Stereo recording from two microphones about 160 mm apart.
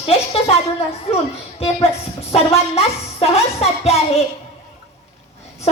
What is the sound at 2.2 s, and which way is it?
A woman's voice, 40° left (ahead or behind).